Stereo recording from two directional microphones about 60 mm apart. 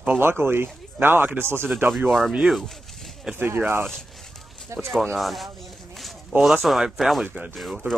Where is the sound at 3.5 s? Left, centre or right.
Right.